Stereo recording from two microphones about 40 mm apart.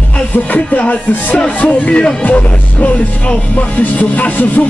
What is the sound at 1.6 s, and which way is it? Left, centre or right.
Speech, left.